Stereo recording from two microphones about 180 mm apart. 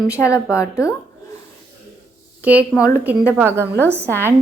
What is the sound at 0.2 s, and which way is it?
Speech, 15° left (ahead or behind).